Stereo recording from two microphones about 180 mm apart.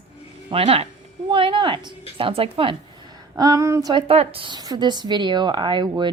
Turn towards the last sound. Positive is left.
turn(degrees=-25)  # may be behind; listen again after turning